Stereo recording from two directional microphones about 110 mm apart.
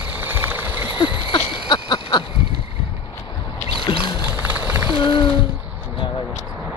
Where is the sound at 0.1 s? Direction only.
20° right (ahead or behind).